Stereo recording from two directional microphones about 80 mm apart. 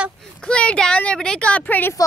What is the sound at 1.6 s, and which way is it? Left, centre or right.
Speech, left.